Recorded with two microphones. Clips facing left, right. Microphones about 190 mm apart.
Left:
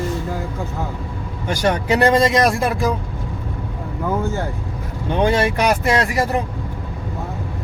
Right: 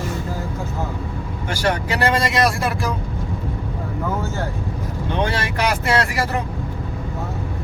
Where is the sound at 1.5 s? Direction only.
20° left (ahead or behind).